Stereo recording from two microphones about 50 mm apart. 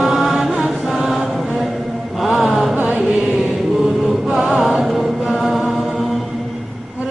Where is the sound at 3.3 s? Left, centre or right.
Right.